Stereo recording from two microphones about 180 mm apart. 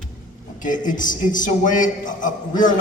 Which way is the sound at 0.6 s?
45° left (ahead or behind).